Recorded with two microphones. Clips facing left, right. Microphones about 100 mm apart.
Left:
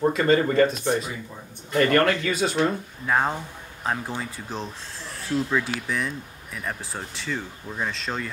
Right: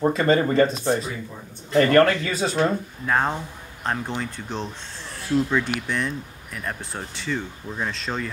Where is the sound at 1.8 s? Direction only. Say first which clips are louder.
Right 3 dB; 35° right (ahead or behind).